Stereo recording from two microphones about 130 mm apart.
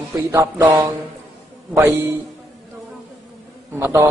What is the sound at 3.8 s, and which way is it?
Speech, 20° right (ahead or behind).